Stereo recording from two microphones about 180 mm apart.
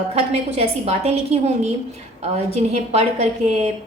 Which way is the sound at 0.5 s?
35° right (ahead or behind).